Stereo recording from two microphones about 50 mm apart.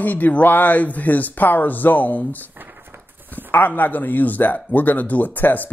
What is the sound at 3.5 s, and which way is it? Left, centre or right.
Speech, left.